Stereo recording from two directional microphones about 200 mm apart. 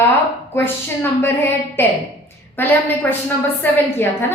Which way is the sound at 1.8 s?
10° left (ahead or behind).